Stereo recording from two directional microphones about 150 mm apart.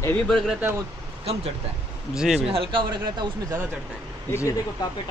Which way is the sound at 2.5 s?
35° right (ahead or behind).